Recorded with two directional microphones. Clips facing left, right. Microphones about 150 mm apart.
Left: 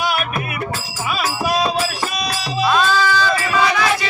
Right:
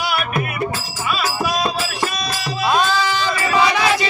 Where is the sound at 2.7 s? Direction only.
15° right (ahead or behind).